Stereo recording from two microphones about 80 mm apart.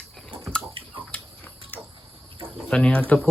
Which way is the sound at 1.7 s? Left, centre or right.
Left.